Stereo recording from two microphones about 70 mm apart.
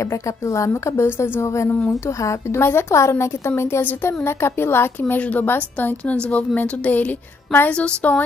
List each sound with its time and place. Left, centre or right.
0.5 s a woman's voice: left; by 8.2 s centre